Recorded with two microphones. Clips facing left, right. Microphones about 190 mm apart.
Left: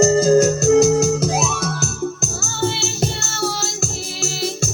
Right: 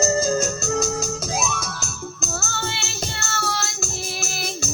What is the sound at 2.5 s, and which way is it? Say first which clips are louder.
Music: left 8 dB; 65° right (ahead or behind).